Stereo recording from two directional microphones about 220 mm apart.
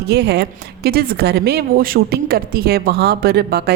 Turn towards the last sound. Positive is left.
turn(degrees=-45)  # may be behind; listen again after turning